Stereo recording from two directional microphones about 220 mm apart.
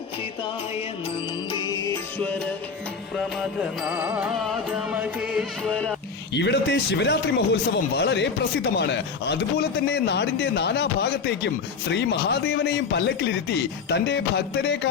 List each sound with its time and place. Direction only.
1.5 s music: 20° left (ahead or behind)
3.3 s music: 5° right (ahead or behind)
6.3 s speech: 50° left (ahead or behind)